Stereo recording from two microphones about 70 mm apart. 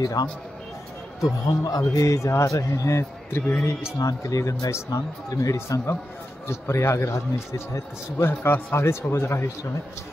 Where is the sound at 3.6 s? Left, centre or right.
Left.